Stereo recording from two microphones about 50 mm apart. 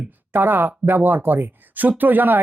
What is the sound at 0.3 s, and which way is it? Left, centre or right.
Speech, right.